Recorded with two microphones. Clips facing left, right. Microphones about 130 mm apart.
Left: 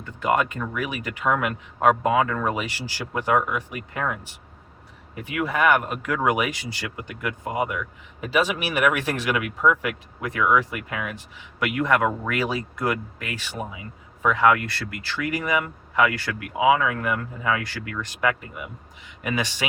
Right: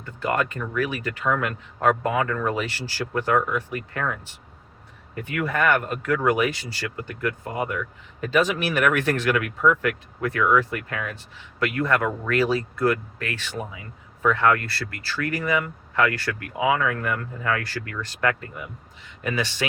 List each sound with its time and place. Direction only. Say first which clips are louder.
0.3 s speech: left 2 dB; 15° left (ahead or behind)